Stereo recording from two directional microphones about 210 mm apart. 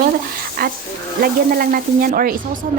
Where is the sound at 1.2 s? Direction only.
45° right (ahead or behind).